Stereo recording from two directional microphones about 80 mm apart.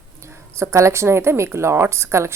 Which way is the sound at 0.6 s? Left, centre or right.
Right.